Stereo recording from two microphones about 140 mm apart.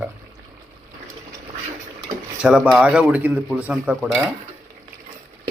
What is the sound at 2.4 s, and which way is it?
A man's voice, 5° right (ahead or behind).